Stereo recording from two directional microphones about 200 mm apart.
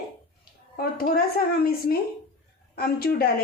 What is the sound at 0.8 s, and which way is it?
Speech, 45° left (ahead or behind).